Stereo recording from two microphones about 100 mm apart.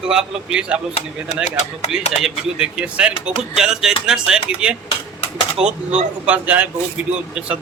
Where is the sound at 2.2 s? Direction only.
5° right (ahead or behind).